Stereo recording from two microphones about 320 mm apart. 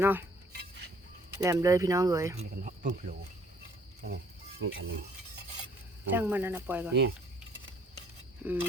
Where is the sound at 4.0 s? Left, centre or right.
Right.